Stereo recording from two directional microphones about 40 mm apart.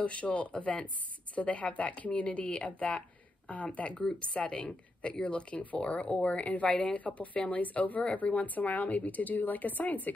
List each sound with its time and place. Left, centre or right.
0.0 s a woman's voice: left
4.6 s speech: centre
5.2 s a woman's voice: left